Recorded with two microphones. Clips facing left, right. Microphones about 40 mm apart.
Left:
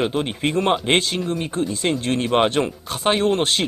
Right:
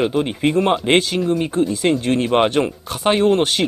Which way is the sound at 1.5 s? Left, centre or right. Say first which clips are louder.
Right 5 dB; centre.